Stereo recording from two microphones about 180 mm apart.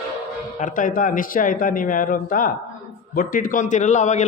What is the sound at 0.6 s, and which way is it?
A man's voice, 45° left (ahead or behind).